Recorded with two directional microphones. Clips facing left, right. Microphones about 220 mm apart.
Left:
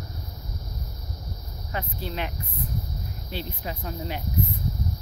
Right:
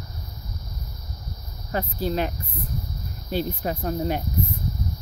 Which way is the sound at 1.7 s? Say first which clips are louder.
Right 7 dB; 40° right (ahead or behind).